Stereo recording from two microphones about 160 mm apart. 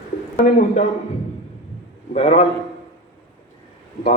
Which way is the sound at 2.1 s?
40° left (ahead or behind).